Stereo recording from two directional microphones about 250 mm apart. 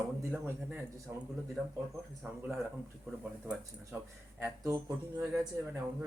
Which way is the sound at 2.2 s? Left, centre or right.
Centre.